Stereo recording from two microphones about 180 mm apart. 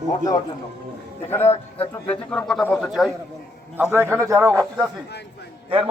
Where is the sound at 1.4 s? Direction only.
35° left (ahead or behind).